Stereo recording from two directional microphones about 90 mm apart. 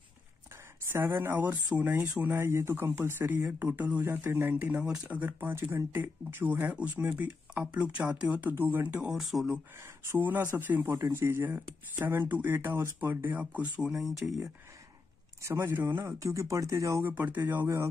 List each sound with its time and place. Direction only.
0.8 s speech: 30° right (ahead or behind)
9.1 s speech: centre (ahead or behind)
10.0 s speech: 20° right (ahead or behind)
13.9 s speech: centre (ahead or behind)
15.4 s speech: 30° right (ahead or behind)
17.1 s speech: 20° right (ahead or behind)